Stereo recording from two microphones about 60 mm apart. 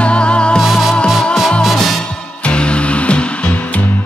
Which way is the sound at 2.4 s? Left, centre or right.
Centre.